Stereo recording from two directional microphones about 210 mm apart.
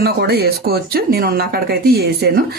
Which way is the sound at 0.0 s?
50° right (ahead or behind).